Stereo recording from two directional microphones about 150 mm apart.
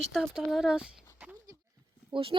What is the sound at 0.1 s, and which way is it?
Speech, centre (ahead or behind).